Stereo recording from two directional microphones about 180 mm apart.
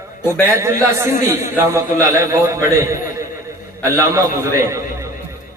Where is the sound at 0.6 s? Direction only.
15° right (ahead or behind).